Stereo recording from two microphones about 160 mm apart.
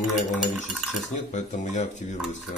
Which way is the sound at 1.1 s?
50° left (ahead or behind).